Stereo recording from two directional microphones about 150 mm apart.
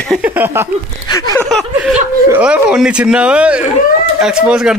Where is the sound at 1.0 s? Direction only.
25° left (ahead or behind).